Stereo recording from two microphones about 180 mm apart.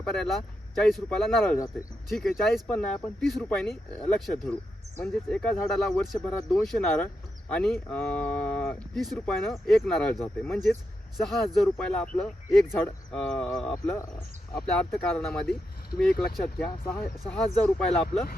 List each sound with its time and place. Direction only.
0.0 s speech: centre (ahead or behind)
1.5 s speech: 20° left (ahead or behind)
2.0 s speech: centre (ahead or behind)
16.9 s speech: 5° left (ahead or behind)